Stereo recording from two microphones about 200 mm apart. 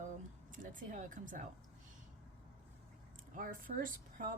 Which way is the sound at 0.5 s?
40° right (ahead or behind).